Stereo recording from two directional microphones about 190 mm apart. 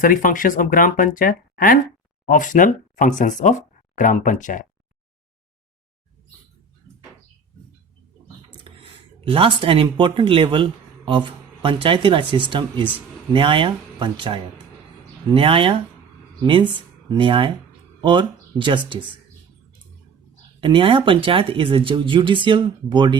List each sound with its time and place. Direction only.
0.0 s speech: 45° left (ahead or behind)
8.6 s speech: 30° right (ahead or behind)
20.6 s speech: 25° right (ahead or behind)